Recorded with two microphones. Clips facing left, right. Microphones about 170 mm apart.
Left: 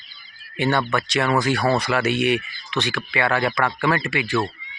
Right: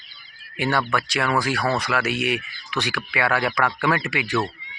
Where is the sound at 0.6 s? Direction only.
10° right (ahead or behind).